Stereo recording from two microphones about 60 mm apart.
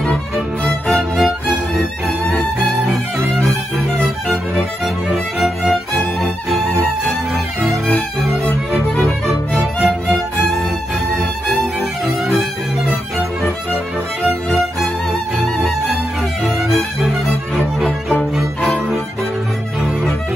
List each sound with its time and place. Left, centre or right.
0.8 s music: centre
4.6 s music: centre
9.8 s music: centre
16.4 s music: centre
18.3 s music: centre